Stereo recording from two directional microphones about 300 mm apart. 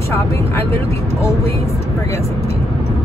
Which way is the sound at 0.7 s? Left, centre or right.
Centre.